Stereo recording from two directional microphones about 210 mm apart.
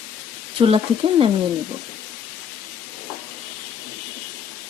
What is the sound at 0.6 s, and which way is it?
Speech, 25° right (ahead or behind).